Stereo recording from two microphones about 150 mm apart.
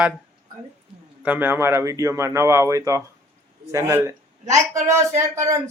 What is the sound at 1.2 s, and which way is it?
Speech, 10° right (ahead or behind).